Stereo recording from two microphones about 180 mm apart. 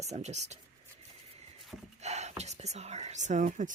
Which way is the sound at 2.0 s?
40° right (ahead or behind).